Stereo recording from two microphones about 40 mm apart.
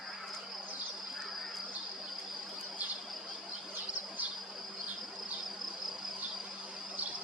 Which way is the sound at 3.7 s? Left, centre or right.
Right.